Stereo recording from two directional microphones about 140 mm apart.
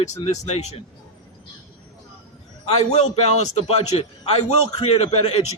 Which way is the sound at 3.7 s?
45° left (ahead or behind).